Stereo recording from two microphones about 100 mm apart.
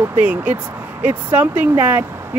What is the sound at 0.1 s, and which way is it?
Speech, 15° right (ahead or behind).